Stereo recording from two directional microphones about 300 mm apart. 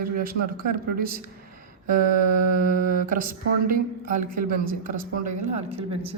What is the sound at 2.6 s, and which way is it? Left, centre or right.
A man's voice, right.